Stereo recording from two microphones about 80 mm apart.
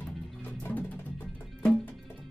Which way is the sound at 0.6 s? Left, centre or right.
Left.